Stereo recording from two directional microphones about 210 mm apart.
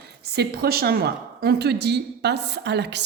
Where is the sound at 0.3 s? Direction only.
50° right (ahead or behind).